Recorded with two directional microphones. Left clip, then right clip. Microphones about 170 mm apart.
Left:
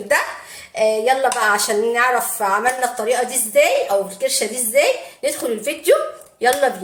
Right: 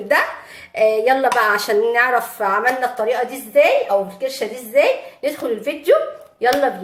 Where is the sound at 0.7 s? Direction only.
20° right (ahead or behind).